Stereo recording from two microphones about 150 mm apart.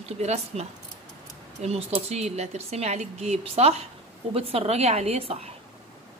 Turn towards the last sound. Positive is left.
turn(degrees=-45)  # may be behind; listen again after turning